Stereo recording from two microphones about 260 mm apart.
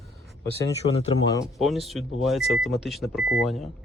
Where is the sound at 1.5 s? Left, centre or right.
Centre.